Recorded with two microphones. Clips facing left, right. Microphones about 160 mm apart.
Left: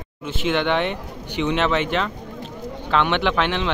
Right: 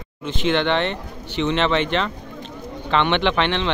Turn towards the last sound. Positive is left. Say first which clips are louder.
# right 1 dB
turn(degrees=5)  # may be behind; listen again after turning